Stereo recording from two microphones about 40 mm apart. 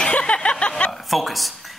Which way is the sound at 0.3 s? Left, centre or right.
Left.